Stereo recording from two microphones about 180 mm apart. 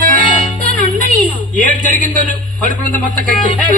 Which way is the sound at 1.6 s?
45° right (ahead or behind).